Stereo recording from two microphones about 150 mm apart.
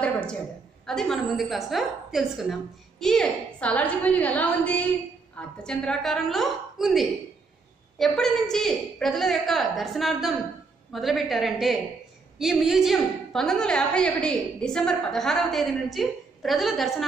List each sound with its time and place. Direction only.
0.0 s a woman's voice: 10° left (ahead or behind)